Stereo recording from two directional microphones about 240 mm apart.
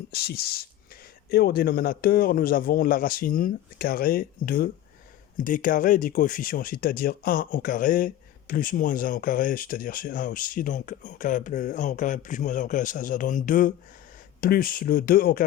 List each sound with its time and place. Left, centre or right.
0.1 s speech: left